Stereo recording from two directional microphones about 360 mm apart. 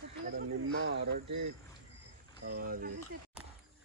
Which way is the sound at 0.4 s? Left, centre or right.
Right.